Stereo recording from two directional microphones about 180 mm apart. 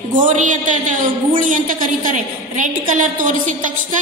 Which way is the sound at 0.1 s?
45° right (ahead or behind).